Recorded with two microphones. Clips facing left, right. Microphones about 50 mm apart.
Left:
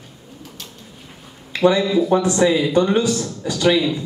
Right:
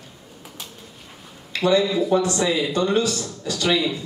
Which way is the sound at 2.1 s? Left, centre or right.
Centre.